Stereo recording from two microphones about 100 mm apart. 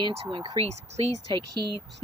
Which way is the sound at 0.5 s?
90° right.